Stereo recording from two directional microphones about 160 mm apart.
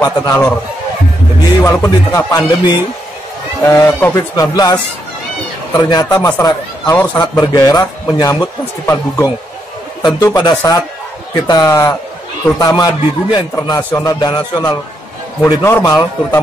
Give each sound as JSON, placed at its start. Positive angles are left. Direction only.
{"t": 0.0, "sound": "a man's voice", "side_deg": 20}
{"t": 1.6, "sound": "a man's voice", "side_deg": 20}
{"t": 5.8, "sound": "a man's voice", "side_deg": 25}
{"t": 6.1, "sound": "a man's voice", "side_deg": 15}